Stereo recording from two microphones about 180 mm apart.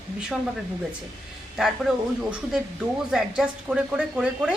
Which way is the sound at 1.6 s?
Centre (ahead or behind).